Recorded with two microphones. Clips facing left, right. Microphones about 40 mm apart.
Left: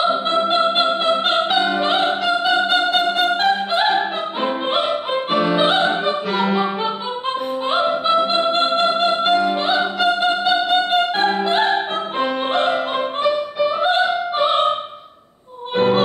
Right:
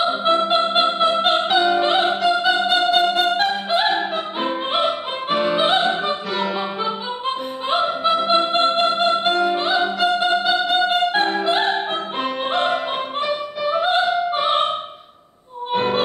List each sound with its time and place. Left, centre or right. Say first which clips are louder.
0.2 s music: even; centre
1.2 s opera: even; centre
6.4 s music: left 6 dB; left
7.7 s music: left 1 dB; centre
13.7 s opera: right 1 dB; centre
15.7 s music: left 3 dB; centre